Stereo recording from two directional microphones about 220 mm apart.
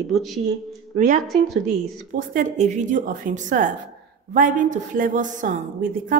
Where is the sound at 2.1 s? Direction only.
40° right (ahead or behind).